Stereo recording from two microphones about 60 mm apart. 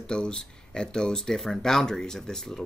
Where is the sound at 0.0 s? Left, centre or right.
Centre.